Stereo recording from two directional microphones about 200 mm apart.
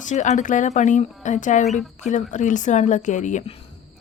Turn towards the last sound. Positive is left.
turn(degrees=40)  # may be behind; listen again after turning